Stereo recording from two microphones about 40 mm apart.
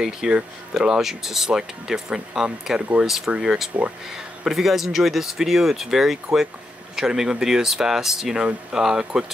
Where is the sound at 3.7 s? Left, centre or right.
Right.